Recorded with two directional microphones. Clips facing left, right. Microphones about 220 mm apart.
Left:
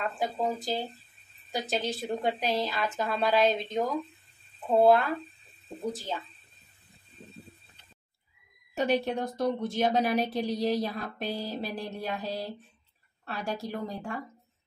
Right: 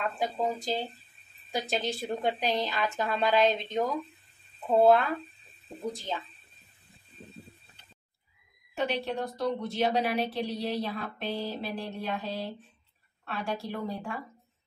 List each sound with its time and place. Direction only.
0.2 s a woman's voice: centre (ahead or behind)
8.7 s a woman's voice: 45° left (ahead or behind)